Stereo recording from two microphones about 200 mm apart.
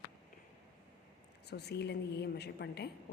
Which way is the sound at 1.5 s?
55° left (ahead or behind).